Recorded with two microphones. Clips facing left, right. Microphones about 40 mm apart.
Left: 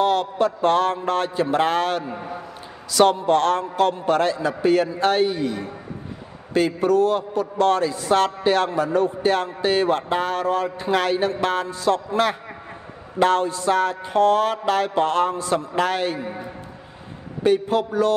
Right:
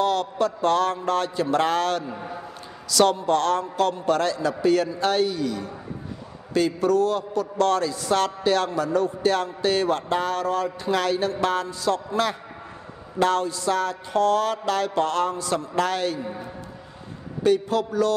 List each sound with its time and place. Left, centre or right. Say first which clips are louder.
0.0 s a man's voice: left 3 dB; left
17.4 s speech: left 2 dB; left